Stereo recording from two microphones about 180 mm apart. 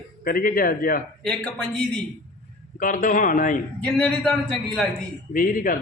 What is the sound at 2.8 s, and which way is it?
Speech, 50° left (ahead or behind).